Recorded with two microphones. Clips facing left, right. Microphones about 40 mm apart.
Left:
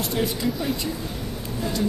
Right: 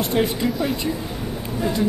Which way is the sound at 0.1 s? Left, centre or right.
Right.